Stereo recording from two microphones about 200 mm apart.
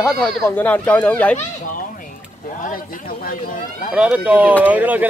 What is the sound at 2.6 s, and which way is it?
Speech, 45° left (ahead or behind).